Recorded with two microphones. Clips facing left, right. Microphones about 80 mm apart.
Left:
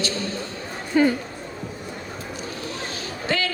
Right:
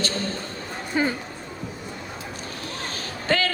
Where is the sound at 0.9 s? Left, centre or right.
Centre.